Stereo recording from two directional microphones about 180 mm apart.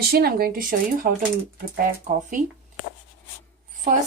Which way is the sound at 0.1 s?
60° right (ahead or behind).